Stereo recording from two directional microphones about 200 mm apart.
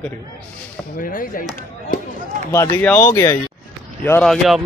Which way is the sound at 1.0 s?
45° left (ahead or behind).